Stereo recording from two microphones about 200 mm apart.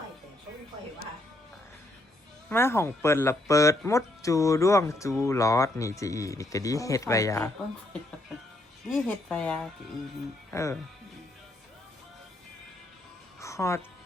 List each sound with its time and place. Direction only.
2.5 s speech: 10° left (ahead or behind)
8.9 s speech: 5° left (ahead or behind)
13.4 s music: 15° left (ahead or behind)